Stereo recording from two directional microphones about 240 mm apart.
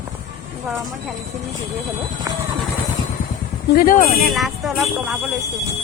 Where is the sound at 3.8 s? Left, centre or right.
Left.